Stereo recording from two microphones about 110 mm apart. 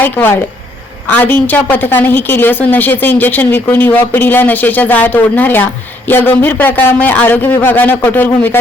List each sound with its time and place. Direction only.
0.0 s a woman's voice: 20° left (ahead or behind)